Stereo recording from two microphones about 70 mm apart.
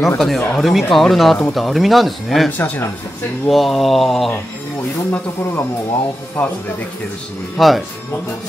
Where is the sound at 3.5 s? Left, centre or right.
Centre.